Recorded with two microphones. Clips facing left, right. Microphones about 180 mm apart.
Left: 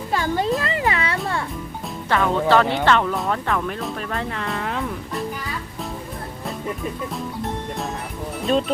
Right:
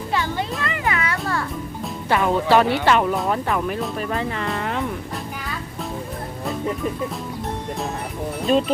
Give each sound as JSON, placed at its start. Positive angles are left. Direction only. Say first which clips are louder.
{"t": 0.1, "sound": "music", "louder": "left 3 dB", "side_deg": 40}
{"t": 0.6, "sound": "a sound", "louder": "left 1 dB", "side_deg": 30}
{"t": 2.0, "sound": "speech", "louder": "even", "side_deg": -15}
{"t": 8.4, "sound": "speech", "louder": "right 2 dB", "side_deg": 0}